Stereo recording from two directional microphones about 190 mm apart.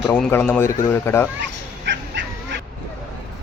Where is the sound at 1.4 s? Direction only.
65° right (ahead or behind).